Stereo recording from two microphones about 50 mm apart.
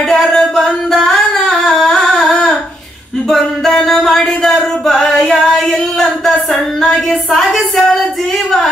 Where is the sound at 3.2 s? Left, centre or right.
Centre.